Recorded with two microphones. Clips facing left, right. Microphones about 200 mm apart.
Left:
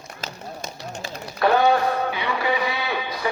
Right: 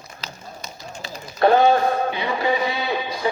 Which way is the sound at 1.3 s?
25° right (ahead or behind).